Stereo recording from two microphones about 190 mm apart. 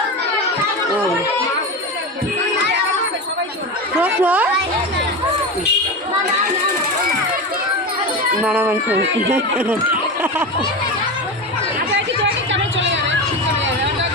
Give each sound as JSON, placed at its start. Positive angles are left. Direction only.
{"t": 4.0, "sound": "speech", "side_deg": -10}
{"t": 8.4, "sound": "speech", "side_deg": -10}
{"t": 12.7, "sound": "a sound", "side_deg": -75}